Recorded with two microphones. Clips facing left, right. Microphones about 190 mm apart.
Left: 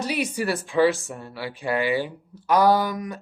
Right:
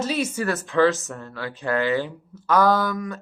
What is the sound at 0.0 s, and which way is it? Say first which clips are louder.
Speech: right 1 dB; 15° left (ahead or behind).